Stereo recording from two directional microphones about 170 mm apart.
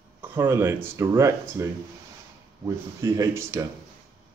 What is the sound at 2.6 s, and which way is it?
Speech, 20° right (ahead or behind).